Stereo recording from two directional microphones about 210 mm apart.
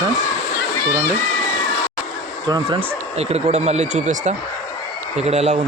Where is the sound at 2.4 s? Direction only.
20° right (ahead or behind).